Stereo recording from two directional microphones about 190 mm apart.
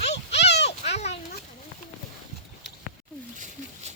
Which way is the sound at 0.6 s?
35° left (ahead or behind).